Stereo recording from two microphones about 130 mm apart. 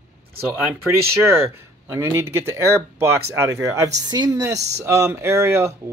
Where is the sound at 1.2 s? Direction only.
20° right (ahead or behind).